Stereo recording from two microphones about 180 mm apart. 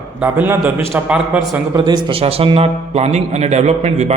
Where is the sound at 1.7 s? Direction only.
25° right (ahead or behind).